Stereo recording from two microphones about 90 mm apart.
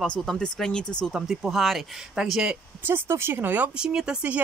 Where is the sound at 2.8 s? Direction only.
25° right (ahead or behind).